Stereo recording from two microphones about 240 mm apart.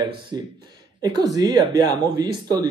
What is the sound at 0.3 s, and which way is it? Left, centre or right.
Speech, centre.